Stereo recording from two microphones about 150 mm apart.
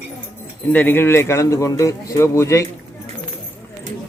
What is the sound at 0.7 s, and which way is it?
Speech, 15° left (ahead or behind).